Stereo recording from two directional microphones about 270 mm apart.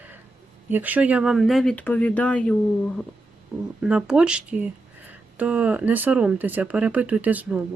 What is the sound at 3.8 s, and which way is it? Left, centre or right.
Speech, centre.